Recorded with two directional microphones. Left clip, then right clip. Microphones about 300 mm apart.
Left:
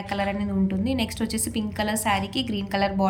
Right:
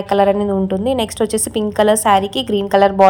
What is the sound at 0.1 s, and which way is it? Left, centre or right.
Speech, right.